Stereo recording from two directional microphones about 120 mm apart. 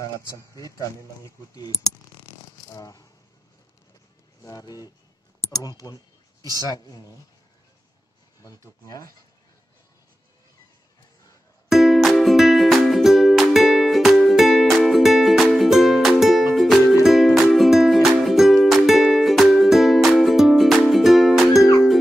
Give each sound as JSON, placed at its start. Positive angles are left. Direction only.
{"t": 0.6, "sound": "speech", "side_deg": 30}
{"t": 2.7, "sound": "speech", "side_deg": 30}
{"t": 4.5, "sound": "speech", "side_deg": 30}
{"t": 6.4, "sound": "speech", "side_deg": -35}
{"t": 6.7, "sound": "speech", "side_deg": 30}
{"t": 8.4, "sound": "speech", "side_deg": 30}
{"t": 11.7, "sound": "music", "side_deg": 0}